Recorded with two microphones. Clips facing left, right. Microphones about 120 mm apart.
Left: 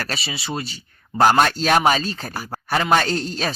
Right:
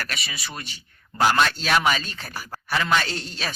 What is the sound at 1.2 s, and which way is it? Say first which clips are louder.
Speech: left 5 dB; 45° left (ahead or behind).